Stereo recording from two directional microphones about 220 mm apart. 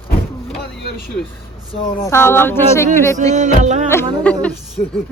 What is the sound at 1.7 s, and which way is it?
Speech, 15° left (ahead or behind).